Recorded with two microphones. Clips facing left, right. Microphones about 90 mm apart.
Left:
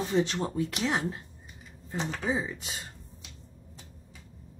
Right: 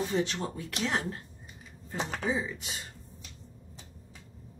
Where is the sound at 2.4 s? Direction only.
30° left (ahead or behind).